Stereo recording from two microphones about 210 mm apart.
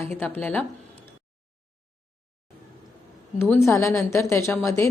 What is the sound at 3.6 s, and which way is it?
Speech, 15° left (ahead or behind).